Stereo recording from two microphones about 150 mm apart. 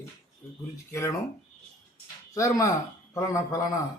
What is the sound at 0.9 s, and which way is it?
Speech, 20° left (ahead or behind).